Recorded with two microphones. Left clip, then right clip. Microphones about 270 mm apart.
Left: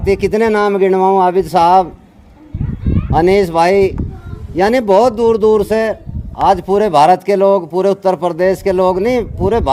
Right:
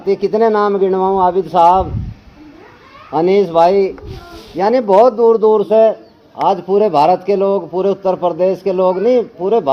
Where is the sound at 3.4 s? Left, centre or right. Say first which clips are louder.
Even; left.